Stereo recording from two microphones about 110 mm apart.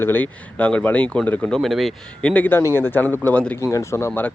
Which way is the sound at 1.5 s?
Centre (ahead or behind).